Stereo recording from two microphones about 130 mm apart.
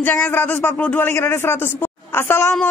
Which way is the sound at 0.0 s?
15° left (ahead or behind).